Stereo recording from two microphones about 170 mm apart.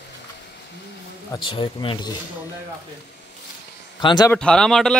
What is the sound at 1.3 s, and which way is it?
Speech, 30° left (ahead or behind).